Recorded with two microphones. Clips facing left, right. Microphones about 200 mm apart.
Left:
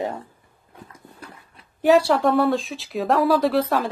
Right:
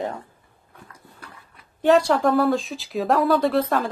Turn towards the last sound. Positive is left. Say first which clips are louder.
# left 1 dB
turn(degrees=0)  # may be behind; listen again after turning